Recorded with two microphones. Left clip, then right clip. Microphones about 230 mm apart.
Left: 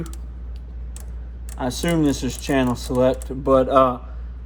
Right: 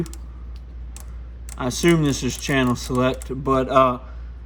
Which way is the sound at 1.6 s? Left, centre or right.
Right.